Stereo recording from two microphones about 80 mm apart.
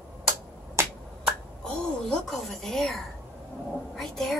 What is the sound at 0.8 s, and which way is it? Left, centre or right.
Finger snapping, right.